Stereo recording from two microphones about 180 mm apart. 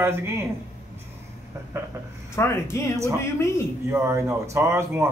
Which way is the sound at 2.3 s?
15° left (ahead or behind).